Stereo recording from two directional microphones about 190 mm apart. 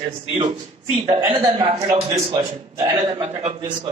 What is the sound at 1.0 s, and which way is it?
A man's voice, 20° right (ahead or behind).